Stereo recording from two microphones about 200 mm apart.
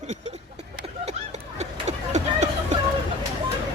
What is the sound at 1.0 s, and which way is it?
Run, 35° right (ahead or behind).